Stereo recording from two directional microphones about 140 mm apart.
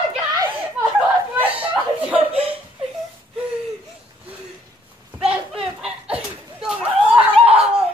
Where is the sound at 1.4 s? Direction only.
10° right (ahead or behind).